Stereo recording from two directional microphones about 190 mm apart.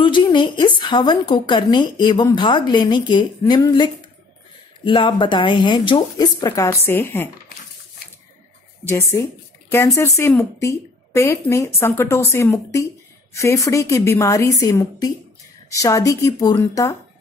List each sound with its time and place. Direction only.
0.0 s a woman's voice: 25° left (ahead or behind)
9.7 s speech: 15° left (ahead or behind)